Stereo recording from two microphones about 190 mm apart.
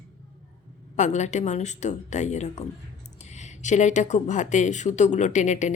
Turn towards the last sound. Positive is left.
turn(degrees=40)  # may be behind; listen again after turning